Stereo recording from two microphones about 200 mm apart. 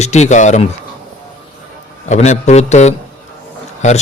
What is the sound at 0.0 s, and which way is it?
Speech, 35° left (ahead or behind).